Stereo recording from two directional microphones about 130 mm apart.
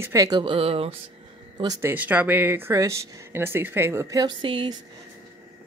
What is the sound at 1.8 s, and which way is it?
Speech, 15° right (ahead or behind).